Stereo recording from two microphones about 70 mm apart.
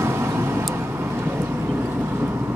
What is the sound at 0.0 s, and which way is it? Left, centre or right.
Vehicle, right.